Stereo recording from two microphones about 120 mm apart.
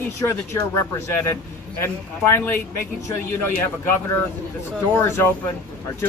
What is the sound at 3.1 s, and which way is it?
A man's voice, 20° left (ahead or behind).